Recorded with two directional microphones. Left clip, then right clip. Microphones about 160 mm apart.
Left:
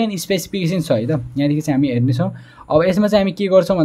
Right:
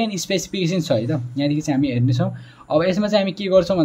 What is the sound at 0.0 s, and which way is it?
A man's voice, 30° left (ahead or behind).